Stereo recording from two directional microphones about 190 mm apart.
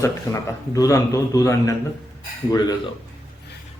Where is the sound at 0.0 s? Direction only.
15° left (ahead or behind).